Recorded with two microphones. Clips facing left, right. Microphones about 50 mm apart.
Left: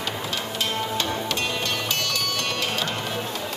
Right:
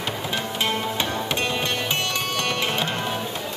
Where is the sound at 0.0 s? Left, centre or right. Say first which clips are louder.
Right 2 dB; right.